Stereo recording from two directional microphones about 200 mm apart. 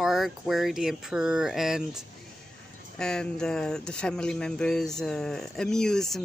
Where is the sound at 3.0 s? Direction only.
5° left (ahead or behind).